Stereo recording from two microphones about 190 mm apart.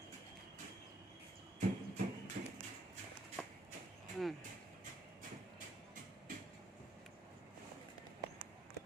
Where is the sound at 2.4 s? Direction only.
45° right (ahead or behind).